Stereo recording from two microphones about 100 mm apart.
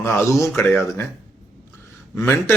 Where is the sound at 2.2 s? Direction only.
25° left (ahead or behind).